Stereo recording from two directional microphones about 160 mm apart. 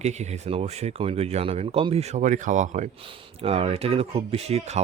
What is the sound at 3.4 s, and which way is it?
Speech, 40° right (ahead or behind).